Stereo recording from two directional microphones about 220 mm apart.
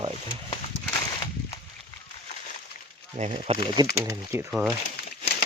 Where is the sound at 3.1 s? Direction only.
30° right (ahead or behind).